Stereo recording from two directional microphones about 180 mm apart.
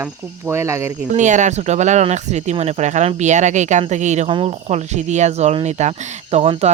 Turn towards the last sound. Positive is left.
turn(degrees=-35)  # may be behind; listen again after turning